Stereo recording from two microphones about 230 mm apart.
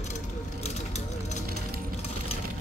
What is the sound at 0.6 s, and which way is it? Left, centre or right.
Ratchet, left.